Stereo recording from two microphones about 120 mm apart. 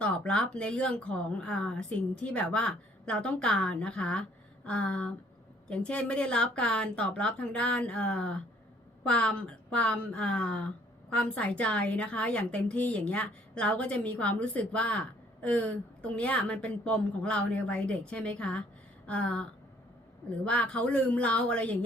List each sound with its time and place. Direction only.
0.0 s a woman's voice: 10° left (ahead or behind)